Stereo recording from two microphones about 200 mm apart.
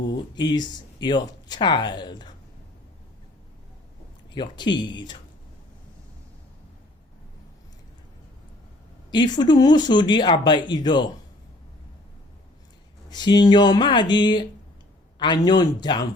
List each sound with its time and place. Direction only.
0.2 s speech: 20° left (ahead or behind)
4.4 s speech: 20° left (ahead or behind)
9.1 s speech: 20° left (ahead or behind)
13.1 s speech: 20° left (ahead or behind)